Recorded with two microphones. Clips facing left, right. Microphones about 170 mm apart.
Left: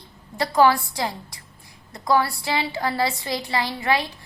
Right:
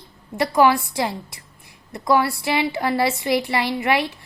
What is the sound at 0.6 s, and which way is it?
A woman's voice, 20° right (ahead or behind).